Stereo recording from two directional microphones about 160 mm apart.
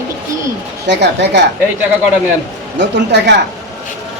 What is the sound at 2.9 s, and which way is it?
Speech, 90° right.